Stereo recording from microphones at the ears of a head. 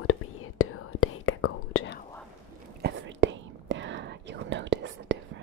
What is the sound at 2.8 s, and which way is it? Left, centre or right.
Whispering, right.